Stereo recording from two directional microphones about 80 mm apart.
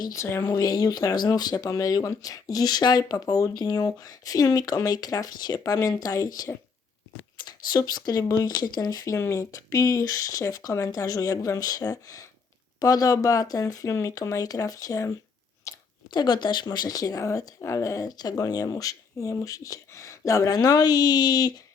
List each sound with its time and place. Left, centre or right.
0.1 s speech: left
0.6 s speech: left
9.1 s speech: left
15.7 s a sound: left
16.1 s speech: left